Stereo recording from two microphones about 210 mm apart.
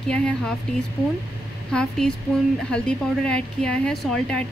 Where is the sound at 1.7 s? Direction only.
5° left (ahead or behind).